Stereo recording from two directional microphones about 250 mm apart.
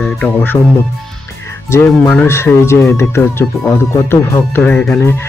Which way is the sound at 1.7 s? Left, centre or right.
Centre.